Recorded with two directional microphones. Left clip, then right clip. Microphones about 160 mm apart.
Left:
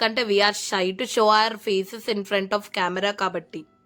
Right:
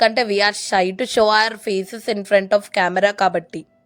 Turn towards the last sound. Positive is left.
turn(degrees=-25)  # may be behind; listen again after turning